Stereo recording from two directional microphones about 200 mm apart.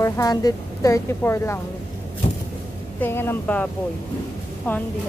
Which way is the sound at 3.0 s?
10° left (ahead or behind).